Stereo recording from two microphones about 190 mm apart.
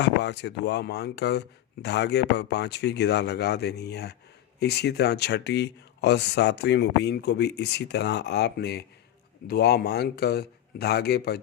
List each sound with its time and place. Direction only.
0.0 s speech: 65° left (ahead or behind)